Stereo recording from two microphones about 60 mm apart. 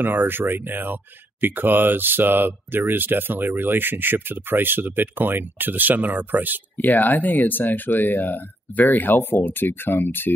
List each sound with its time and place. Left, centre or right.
0.0 s speech: right
6.8 s speech: left